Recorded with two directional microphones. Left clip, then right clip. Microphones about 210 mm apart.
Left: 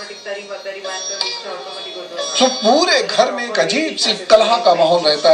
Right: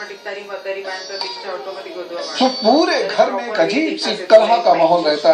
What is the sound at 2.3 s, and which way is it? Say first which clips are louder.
Speech: left 1 dB; 35° left (ahead or behind).